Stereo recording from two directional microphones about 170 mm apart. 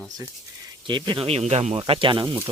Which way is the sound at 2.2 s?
15° right (ahead or behind).